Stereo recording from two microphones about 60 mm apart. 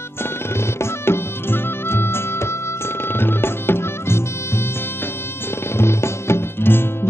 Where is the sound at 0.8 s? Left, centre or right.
Left.